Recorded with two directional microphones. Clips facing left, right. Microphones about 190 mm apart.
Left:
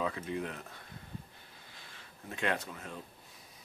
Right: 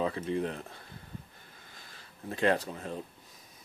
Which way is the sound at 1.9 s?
35° right (ahead or behind).